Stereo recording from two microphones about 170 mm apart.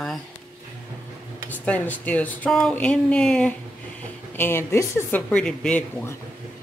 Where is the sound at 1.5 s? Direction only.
10° left (ahead or behind).